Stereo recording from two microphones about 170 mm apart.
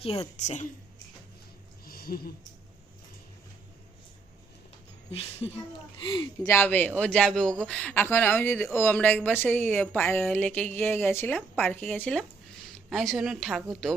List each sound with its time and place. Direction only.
0.0 s a woman's voice: 35° left (ahead or behind)
1.8 s a sound: 60° left (ahead or behind)
5.1 s a woman's voice: 35° left (ahead or behind)
6.5 s a woman's voice: 10° left (ahead or behind)